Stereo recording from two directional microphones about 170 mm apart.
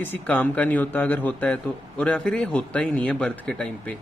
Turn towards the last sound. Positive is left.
turn(degrees=5)  # may be behind; listen again after turning